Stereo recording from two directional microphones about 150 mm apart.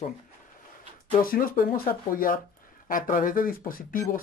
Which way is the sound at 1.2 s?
75° left (ahead or behind).